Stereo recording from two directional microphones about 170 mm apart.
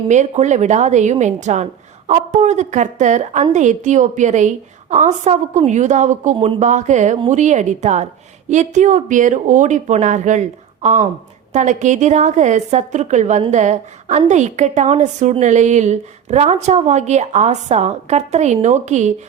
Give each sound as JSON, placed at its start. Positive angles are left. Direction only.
{"t": 0.1, "sound": "a woman's voice", "side_deg": -45}